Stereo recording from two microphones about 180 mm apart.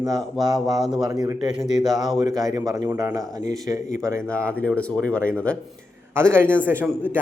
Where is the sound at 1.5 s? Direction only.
Centre (ahead or behind).